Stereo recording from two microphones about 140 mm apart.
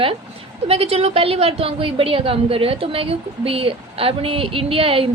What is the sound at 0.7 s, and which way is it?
A woman's voice, 45° right (ahead or behind).